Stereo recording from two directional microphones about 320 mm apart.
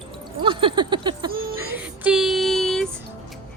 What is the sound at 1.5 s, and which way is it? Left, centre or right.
Child singing, centre.